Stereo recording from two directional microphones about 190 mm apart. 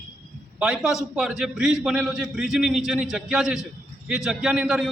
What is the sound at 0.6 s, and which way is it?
A man's voice, 5° right (ahead or behind).